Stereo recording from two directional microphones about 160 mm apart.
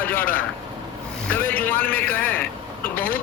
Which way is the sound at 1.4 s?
10° left (ahead or behind).